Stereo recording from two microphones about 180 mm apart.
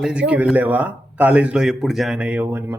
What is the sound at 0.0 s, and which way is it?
A man's voice, 5° right (ahead or behind).